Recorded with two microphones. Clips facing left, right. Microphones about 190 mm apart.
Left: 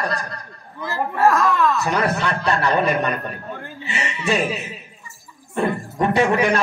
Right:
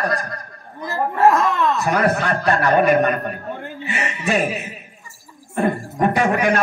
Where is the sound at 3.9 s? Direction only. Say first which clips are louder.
Right 1 dB; 50° right (ahead or behind).